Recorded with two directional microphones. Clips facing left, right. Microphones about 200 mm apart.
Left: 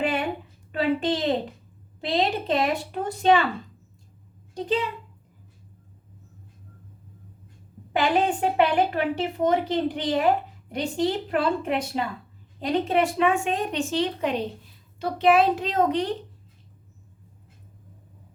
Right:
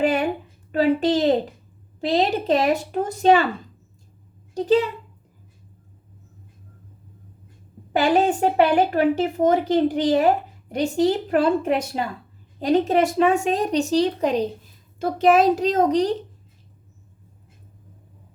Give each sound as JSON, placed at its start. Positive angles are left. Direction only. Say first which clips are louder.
{"t": 0.0, "sound": "a sound", "louder": "right 5 dB", "side_deg": -40}
{"t": 0.7, "sound": "a woman's voice", "louder": "right 5 dB", "side_deg": -40}
{"t": 4.5, "sound": "a woman's voice", "louder": "right 7 dB", "side_deg": -40}
{"t": 7.9, "sound": "a woman's voice", "louder": "right 4 dB", "side_deg": -45}